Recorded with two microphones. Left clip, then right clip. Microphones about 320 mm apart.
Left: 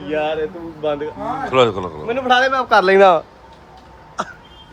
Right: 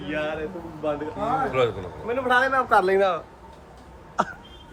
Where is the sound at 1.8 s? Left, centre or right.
Left.